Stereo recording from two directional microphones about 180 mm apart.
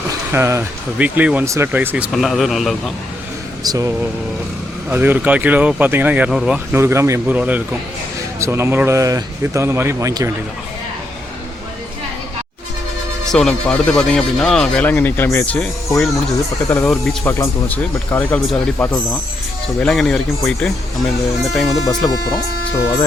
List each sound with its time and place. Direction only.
0.1 s speech: 15° right (ahead or behind)
3.6 s speech: 20° right (ahead or behind)
13.2 s speech: centre (ahead or behind)
21.5 s speech: centre (ahead or behind)